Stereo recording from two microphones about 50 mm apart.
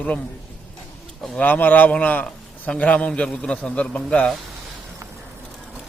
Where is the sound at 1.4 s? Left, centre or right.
Left; by 4.3 s centre.